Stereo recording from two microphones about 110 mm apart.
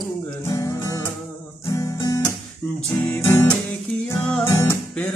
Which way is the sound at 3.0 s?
20° left (ahead or behind).